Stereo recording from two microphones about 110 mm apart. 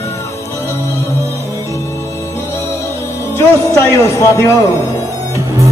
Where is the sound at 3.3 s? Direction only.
25° left (ahead or behind).